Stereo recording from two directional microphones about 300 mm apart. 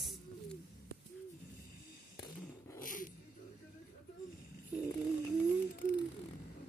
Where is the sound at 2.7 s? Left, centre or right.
Left.